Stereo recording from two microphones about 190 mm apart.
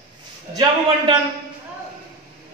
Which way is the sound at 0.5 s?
20° right (ahead or behind).